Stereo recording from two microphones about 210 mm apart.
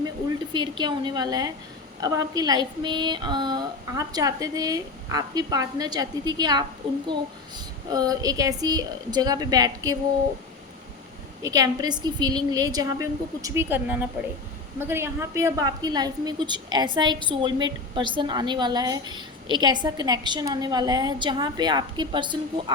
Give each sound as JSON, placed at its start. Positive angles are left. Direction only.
{"t": 0.5, "sound": "a woman's voice", "side_deg": -20}
{"t": 11.4, "sound": "a woman's voice", "side_deg": -15}